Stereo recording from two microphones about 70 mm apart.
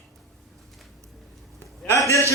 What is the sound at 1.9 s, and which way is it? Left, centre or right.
Speech, left.